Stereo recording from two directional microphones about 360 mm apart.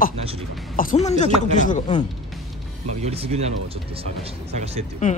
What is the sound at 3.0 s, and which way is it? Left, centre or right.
Speech, centre.